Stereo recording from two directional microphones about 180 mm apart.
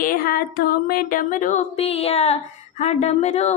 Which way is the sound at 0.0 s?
55° left (ahead or behind).